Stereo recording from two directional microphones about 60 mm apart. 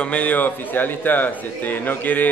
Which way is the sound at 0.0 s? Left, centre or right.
Left.